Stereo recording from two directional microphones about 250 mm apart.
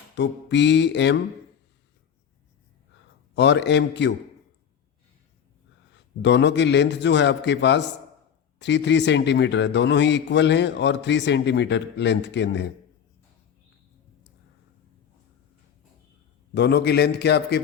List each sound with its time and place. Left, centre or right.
0.2 s a man's voice: left
3.3 s a man's voice: left
6.2 s a man's voice: left
16.6 s a man's voice: left